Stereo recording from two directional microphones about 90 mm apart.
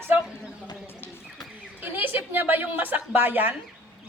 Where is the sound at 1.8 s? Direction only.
20° right (ahead or behind).